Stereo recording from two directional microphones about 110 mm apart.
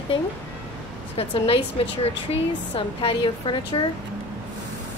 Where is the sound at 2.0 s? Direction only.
65° left (ahead or behind); by 3.9 s 45° left (ahead or behind).